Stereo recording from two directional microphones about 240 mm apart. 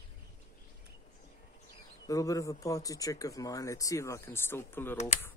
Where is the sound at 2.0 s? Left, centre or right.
Centre.